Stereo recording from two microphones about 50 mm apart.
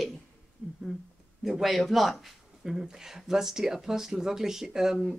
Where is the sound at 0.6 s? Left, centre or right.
Right.